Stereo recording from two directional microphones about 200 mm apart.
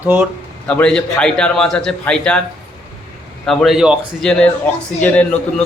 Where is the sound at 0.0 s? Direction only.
10° right (ahead or behind).